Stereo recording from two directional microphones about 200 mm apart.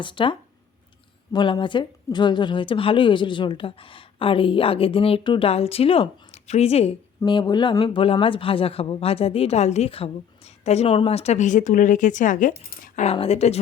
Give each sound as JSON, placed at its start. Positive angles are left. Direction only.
{"t": 0.0, "sound": "speech", "side_deg": 25}
{"t": 13.0, "sound": "speech", "side_deg": 30}